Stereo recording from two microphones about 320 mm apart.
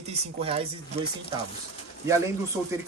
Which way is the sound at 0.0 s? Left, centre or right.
Centre.